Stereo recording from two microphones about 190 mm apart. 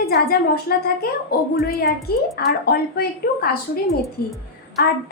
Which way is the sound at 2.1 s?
55° left (ahead or behind).